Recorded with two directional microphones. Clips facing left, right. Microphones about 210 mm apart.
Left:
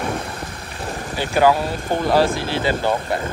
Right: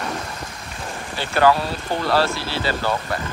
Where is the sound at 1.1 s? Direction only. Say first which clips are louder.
Left 1 dB; 10° left (ahead or behind).